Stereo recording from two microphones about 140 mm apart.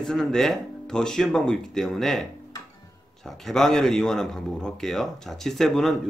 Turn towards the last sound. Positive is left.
turn(degrees=0)  # may be behind; listen again after turning